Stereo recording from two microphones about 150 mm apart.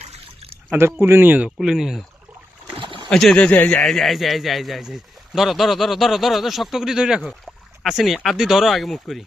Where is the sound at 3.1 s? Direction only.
5° left (ahead or behind).